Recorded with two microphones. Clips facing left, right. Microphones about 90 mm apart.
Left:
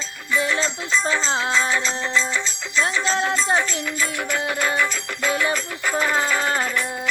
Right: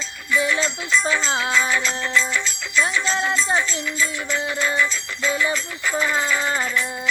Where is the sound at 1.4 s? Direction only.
30° left (ahead or behind).